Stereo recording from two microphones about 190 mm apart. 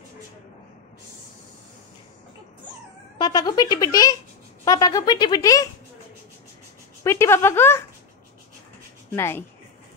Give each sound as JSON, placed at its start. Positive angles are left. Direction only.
{"t": 3.2, "sound": "speech", "side_deg": 20}
{"t": 7.0, "sound": "speech", "side_deg": 15}
{"t": 9.1, "sound": "speech", "side_deg": 15}